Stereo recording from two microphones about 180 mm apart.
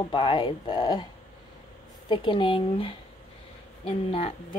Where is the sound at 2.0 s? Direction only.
30° left (ahead or behind).